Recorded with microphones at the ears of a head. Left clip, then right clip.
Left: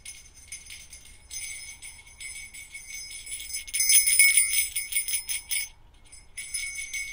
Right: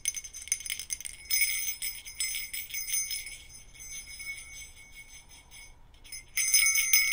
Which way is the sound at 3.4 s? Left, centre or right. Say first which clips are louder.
Left 18 dB; left.